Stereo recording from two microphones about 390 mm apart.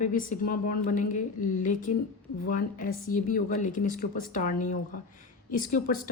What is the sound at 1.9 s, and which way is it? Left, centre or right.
Speech, left.